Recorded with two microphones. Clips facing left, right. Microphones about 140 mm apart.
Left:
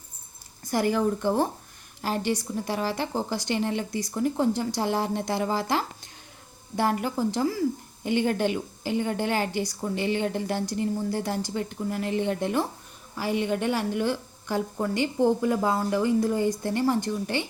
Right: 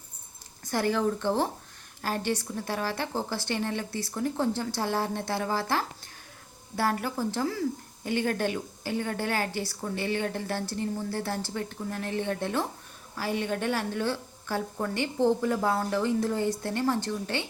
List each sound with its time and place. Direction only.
0.6 s a woman's voice: 10° left (ahead or behind)